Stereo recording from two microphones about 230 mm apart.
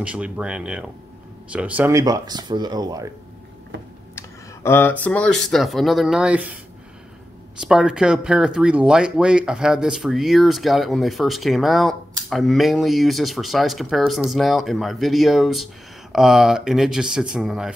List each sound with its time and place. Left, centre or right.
0.0 s speech: centre
4.6 s speech: centre
7.6 s speech: centre